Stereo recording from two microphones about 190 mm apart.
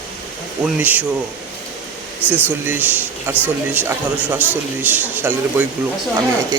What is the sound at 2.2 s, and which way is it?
Speech, 10° left (ahead or behind).